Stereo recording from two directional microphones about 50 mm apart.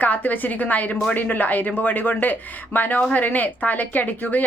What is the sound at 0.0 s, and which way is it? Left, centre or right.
Speech, left.